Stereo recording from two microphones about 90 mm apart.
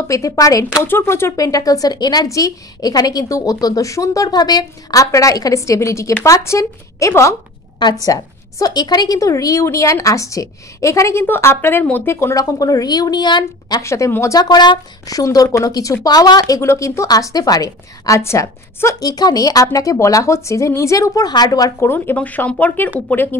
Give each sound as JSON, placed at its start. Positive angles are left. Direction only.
{"t": 0.1, "sound": "a woman's voice", "side_deg": 40}
{"t": 0.8, "sound": "speech", "side_deg": 25}
{"t": 1.4, "sound": "speech", "side_deg": 40}
{"t": 2.2, "sound": "a woman's voice", "side_deg": 40}
{"t": 12.4, "sound": "speech", "side_deg": 40}
{"t": 13.8, "sound": "a woman's voice", "side_deg": 35}
{"t": 14.3, "sound": "a woman's voice", "side_deg": 50}
{"t": 19.0, "sound": "a woman's voice", "side_deg": 45}
{"t": 21.7, "sound": "speech", "side_deg": 25}